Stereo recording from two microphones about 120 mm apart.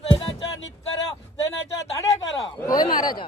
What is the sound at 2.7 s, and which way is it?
Speech, 35° left (ahead or behind).